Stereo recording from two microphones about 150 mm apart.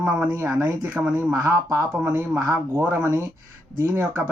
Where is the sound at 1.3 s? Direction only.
25° right (ahead or behind).